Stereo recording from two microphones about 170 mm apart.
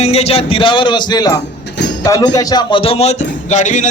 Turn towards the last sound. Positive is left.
turn(degrees=45)  # may be behind; listen again after turning